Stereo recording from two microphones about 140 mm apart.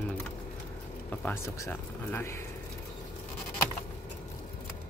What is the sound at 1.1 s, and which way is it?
Speech, 15° left (ahead or behind).